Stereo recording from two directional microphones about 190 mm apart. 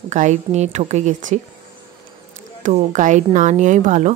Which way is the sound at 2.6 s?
40° right (ahead or behind).